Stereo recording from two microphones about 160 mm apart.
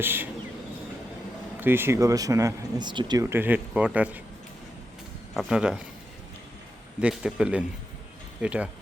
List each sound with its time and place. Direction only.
0.0 s speech: 10° right (ahead or behind)
1.6 s speech: 15° right (ahead or behind)
5.3 s speech: centre (ahead or behind)
7.0 s speech: 5° right (ahead or behind)